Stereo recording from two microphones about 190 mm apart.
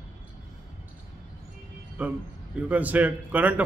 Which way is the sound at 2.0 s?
10° right (ahead or behind).